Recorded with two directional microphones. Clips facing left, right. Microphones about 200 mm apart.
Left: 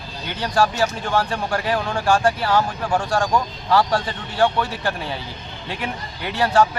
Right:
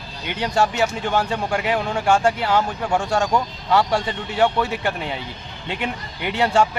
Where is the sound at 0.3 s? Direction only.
25° right (ahead or behind).